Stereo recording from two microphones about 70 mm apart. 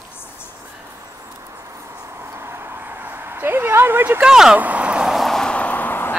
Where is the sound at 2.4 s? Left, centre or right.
Right.